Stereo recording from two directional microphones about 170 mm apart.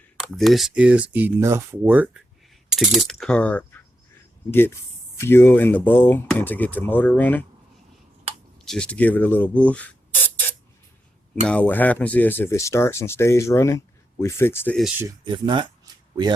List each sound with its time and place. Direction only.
0.2 s speech: centre (ahead or behind)
8.6 s speech: 5° left (ahead or behind)
11.4 s speech: 10° left (ahead or behind)
15.2 s speech: 30° right (ahead or behind)